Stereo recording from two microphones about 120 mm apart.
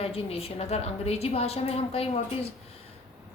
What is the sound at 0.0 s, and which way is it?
Speech, 55° left (ahead or behind).